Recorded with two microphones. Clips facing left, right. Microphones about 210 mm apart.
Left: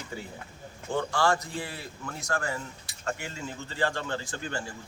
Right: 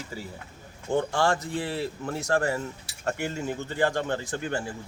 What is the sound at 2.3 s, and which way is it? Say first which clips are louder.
Speech: right 6 dB; 35° right (ahead or behind).